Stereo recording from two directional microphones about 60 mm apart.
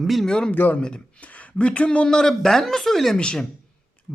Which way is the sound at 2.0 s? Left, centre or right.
Centre.